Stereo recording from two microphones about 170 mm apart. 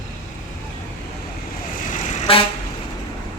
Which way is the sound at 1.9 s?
45° left (ahead or behind).